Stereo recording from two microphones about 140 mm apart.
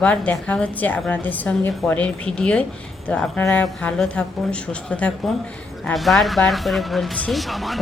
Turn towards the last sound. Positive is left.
turn(degrees=0)  # may be behind; listen again after turning